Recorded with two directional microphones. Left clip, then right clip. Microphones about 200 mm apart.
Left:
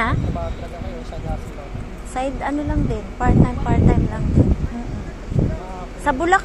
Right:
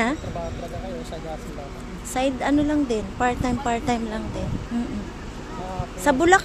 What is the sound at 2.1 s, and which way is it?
Speech, 20° right (ahead or behind).